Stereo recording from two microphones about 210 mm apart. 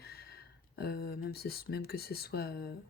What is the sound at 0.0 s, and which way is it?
Speech, 50° left (ahead or behind).